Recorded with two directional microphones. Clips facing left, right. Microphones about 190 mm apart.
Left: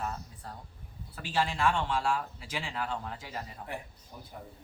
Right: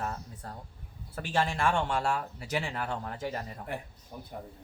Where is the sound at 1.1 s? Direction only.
50° right (ahead or behind).